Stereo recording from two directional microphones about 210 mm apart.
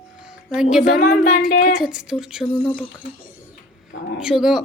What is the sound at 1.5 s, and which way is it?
Speech, 40° left (ahead or behind).